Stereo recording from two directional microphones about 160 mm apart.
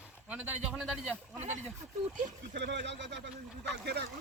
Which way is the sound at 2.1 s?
75° right (ahead or behind).